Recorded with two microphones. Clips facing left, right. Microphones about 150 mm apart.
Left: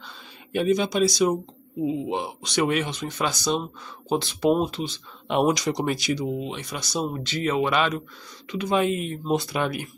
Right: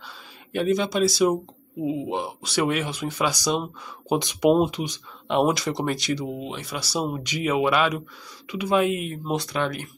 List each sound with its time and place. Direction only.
0.0 s speech: centre (ahead or behind); by 5.0 s 15° right (ahead or behind)
5.3 s speech: centre (ahead or behind)